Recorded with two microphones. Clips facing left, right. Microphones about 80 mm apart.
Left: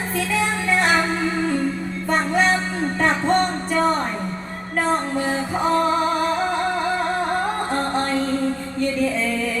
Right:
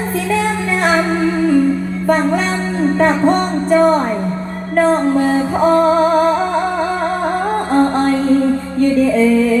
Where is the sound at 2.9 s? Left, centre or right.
Right.